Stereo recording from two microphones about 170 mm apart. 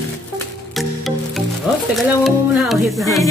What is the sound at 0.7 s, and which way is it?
Music, centre (ahead or behind).